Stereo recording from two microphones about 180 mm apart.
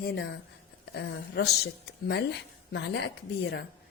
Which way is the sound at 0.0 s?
65° left (ahead or behind).